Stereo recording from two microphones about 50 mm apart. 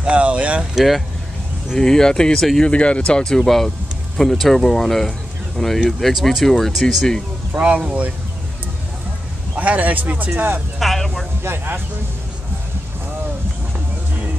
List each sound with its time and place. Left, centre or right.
0.0 s speech: right
0.7 s speech: centre
1.8 s speech: centre
2.6 s speech: left; by 7.2 s centre
7.5 s speech: right
9.6 s speech: right
10.8 s speech: centre
11.4 s speech: right